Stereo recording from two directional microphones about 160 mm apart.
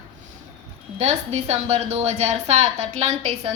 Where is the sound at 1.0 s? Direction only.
45° right (ahead or behind).